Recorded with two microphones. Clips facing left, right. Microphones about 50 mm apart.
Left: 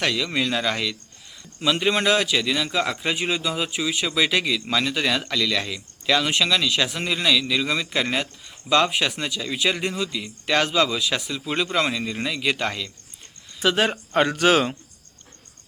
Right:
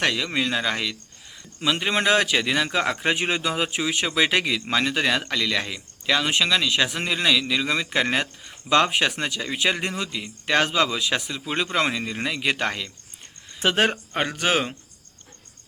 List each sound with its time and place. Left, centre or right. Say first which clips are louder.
0.0 s speech: even; right
0.3 s speech: even; centre
2.0 s a man's voice: even; right
8.4 s a man's voice: even; right
11.3 s speech: left 1 dB; centre
13.6 s speech: left 1 dB; right
14.1 s speech: left 5 dB; centre